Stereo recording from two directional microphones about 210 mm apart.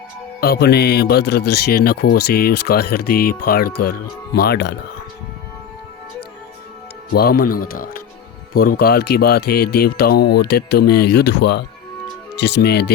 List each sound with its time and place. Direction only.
0.3 s speech: 45° left (ahead or behind)
7.1 s speech: 50° left (ahead or behind)